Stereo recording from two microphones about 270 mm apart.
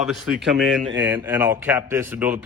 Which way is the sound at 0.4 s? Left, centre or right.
Centre.